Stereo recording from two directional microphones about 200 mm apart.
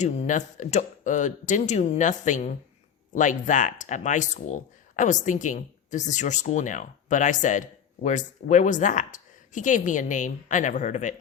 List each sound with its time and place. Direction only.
0.0 s speech: 35° left (ahead or behind)